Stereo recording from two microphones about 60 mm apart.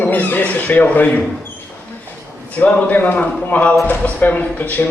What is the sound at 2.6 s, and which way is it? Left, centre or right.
Speech, left.